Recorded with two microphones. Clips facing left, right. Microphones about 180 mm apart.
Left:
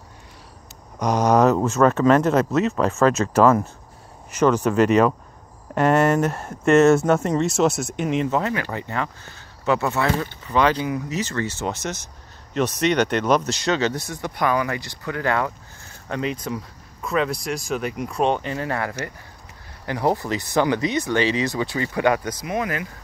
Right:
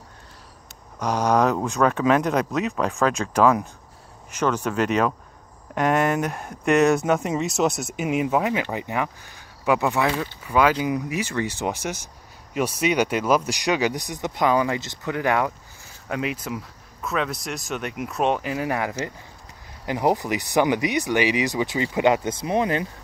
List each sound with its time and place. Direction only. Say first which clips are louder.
1.2 s speech: left 3 dB; 5° left (ahead or behind)
7.1 s speech: left 3 dB; 5° right (ahead or behind); by 22.8 s 30° right (ahead or behind)